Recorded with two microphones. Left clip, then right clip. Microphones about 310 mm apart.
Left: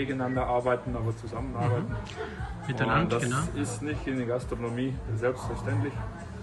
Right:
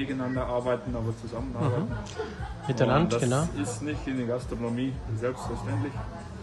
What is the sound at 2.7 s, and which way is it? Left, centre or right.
A man's voice, centre.